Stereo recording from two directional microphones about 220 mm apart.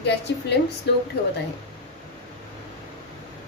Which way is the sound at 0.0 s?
50° left (ahead or behind).